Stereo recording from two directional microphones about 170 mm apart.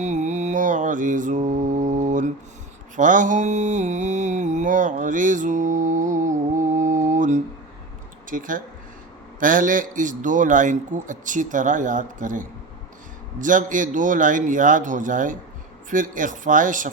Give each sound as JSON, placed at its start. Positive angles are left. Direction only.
{"t": 0.0, "sound": "mantra", "side_deg": -45}
{"t": 8.3, "sound": "speech", "side_deg": -50}